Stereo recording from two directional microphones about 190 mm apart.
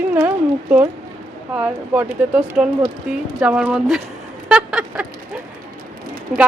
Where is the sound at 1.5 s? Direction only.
10° right (ahead or behind).